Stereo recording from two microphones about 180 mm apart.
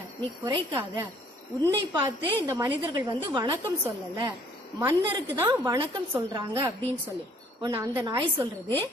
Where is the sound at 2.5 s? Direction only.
15° right (ahead or behind).